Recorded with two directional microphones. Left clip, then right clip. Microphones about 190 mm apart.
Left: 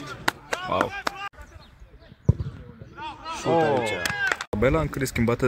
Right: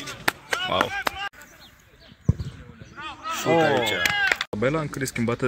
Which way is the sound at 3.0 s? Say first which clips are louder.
Right 2 dB; 55° left (ahead or behind).